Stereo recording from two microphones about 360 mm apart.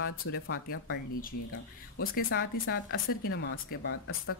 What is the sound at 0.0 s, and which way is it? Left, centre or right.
Speech, left.